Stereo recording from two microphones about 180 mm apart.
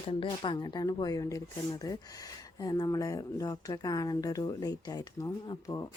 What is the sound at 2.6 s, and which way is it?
Speech, 20° left (ahead or behind).